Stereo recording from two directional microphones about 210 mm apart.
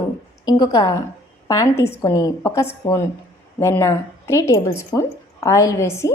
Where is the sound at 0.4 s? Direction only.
20° left (ahead or behind).